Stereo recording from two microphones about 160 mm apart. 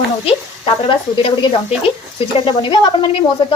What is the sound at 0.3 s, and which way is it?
Speech, 35° left (ahead or behind).